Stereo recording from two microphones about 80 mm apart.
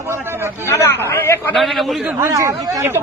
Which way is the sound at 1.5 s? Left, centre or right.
Centre.